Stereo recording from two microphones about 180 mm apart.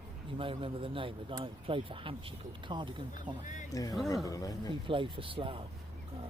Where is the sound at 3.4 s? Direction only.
45° left (ahead or behind).